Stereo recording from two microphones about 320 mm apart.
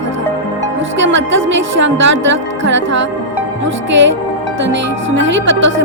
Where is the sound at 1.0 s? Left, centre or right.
Right.